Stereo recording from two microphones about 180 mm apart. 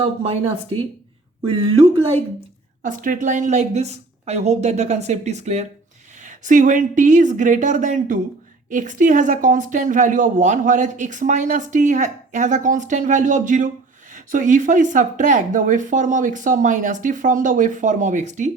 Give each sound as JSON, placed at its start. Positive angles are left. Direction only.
{"t": 0.0, "sound": "a woman's voice", "side_deg": -30}
{"t": 2.8, "sound": "a woman's voice", "side_deg": -50}